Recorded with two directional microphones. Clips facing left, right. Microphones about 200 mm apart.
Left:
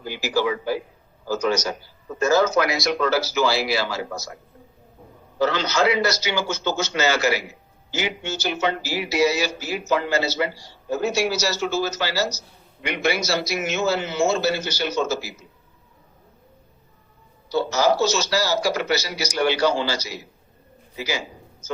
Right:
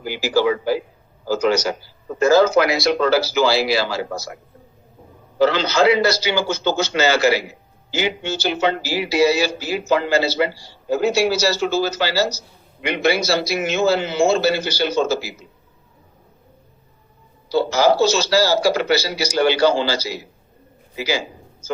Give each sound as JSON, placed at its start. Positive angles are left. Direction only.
{"t": 0.2, "sound": "a man's voice", "side_deg": -30}
{"t": 0.4, "sound": "a man's voice", "side_deg": -90}
{"t": 1.5, "sound": "a man's voice", "side_deg": -30}
{"t": 5.4, "sound": "a man's voice", "side_deg": -30}
{"t": 17.5, "sound": "a man's voice", "side_deg": -30}